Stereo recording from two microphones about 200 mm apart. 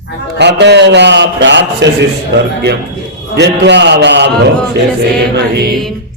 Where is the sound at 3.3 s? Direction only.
60° right (ahead or behind).